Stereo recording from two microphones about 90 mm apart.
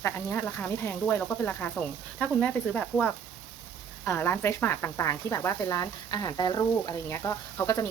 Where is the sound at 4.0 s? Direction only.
25° left (ahead or behind); by 6.9 s 50° left (ahead or behind).